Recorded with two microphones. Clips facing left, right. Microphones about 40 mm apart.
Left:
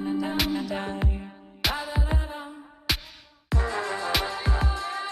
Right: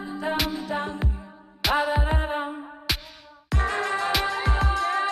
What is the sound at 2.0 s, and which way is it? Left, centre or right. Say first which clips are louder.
Music: right 6 dB; right.